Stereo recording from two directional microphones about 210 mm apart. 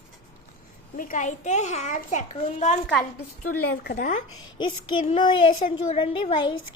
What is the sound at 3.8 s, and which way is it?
Speech, 40° left (ahead or behind).